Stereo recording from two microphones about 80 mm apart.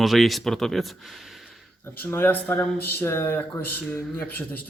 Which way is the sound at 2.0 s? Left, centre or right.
Left.